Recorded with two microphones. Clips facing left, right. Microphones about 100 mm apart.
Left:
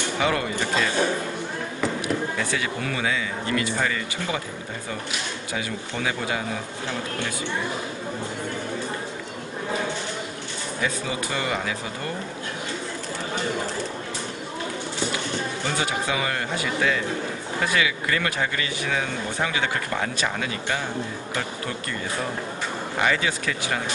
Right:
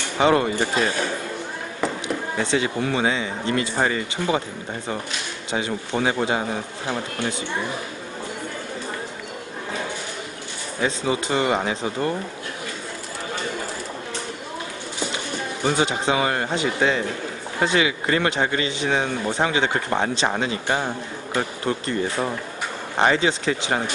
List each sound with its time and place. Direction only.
0.2 s speech: 30° right (ahead or behind)
2.3 s speech: 25° right (ahead or behind)
5.5 s speech: 30° right (ahead or behind)
10.8 s speech: 25° right (ahead or behind)
15.6 s speech: 25° right (ahead or behind)
22.9 s speech: 30° right (ahead or behind)